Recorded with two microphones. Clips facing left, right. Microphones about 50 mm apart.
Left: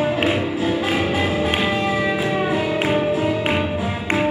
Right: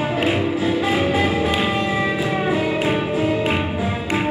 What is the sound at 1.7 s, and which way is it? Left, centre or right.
Music, right.